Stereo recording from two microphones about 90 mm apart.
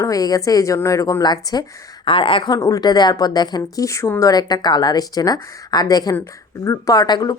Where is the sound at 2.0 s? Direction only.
75° left (ahead or behind).